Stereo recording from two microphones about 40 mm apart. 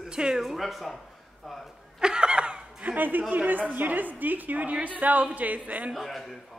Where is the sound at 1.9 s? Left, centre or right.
Right.